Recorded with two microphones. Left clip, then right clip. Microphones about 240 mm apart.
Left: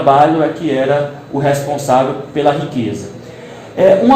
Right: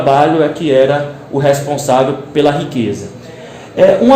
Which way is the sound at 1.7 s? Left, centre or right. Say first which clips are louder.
Right 1 dB; right.